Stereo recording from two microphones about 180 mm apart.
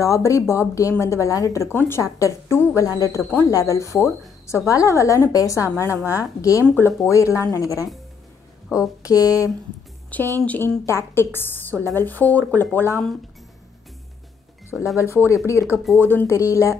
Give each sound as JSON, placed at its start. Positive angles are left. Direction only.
{"t": 0.0, "sound": "speech", "side_deg": 15}
{"t": 9.0, "sound": "speech", "side_deg": 20}
{"t": 11.7, "sound": "a woman's voice", "side_deg": -20}
{"t": 12.0, "sound": "speech", "side_deg": 10}
{"t": 14.7, "sound": "speech", "side_deg": -10}
{"t": 15.0, "sound": "speech", "side_deg": 15}